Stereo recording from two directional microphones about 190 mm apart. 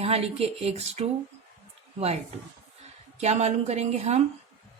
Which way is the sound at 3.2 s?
35° right (ahead or behind).